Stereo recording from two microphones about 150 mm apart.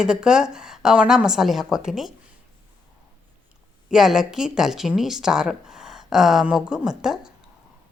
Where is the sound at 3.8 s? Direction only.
5° right (ahead or behind).